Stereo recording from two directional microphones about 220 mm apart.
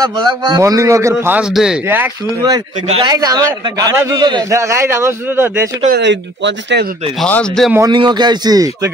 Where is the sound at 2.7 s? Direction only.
30° right (ahead or behind); by 5.7 s 10° right (ahead or behind).